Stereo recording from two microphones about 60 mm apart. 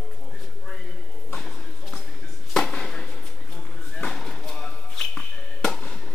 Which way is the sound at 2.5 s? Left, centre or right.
Centre.